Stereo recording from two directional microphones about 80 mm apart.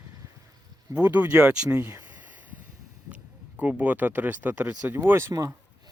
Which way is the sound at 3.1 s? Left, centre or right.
Centre.